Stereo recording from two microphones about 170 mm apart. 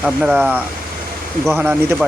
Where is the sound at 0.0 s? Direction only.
5° right (ahead or behind).